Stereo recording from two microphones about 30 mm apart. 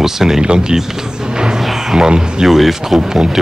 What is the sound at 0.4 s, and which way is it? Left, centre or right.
Speech, right.